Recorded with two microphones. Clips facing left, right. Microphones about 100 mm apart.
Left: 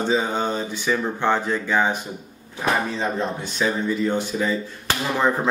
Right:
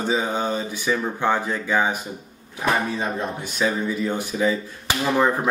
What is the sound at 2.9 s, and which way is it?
Speech, 10° right (ahead or behind).